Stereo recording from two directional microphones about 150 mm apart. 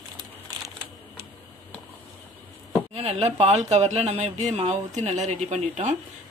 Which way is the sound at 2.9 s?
40° right (ahead or behind).